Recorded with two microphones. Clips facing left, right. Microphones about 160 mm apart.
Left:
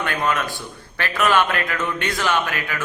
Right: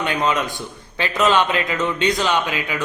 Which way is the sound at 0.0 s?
20° right (ahead or behind).